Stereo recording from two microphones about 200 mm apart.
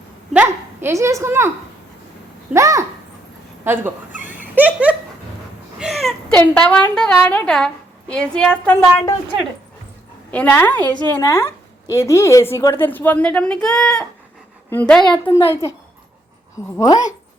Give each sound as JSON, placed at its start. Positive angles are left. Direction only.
{"t": 0.3, "sound": "a woman's voice", "side_deg": -10}
{"t": 2.5, "sound": "a woman's voice", "side_deg": -15}
{"t": 3.6, "sound": "dog", "side_deg": -10}
{"t": 4.5, "sound": "a sound", "side_deg": -10}
{"t": 6.3, "sound": "a woman's voice", "side_deg": 10}
{"t": 10.3, "sound": "a woman's voice", "side_deg": 10}
{"t": 16.7, "sound": "a woman's voice", "side_deg": 15}